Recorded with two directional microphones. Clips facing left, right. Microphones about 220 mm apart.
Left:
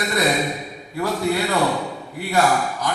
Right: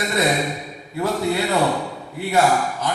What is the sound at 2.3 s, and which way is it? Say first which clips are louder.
Speech: right 1 dB; 25° right (ahead or behind).